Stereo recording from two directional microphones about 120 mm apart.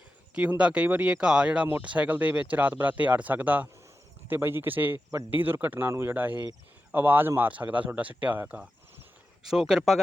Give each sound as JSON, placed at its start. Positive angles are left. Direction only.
{"t": 0.3, "sound": "speech", "side_deg": -10}
{"t": 9.4, "sound": "speech", "side_deg": -5}